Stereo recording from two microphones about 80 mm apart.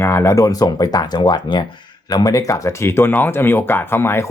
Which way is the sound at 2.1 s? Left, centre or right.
Left.